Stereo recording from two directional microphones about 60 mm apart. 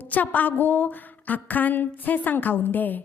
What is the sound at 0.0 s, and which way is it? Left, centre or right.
A woman's voice, left.